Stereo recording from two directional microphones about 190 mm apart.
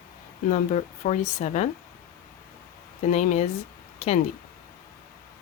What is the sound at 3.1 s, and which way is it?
Speech, 35° left (ahead or behind).